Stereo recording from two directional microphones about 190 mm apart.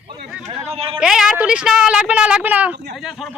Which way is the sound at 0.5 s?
35° right (ahead or behind).